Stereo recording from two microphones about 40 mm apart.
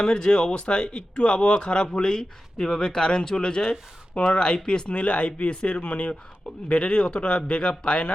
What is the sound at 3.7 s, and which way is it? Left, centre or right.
Speech, centre.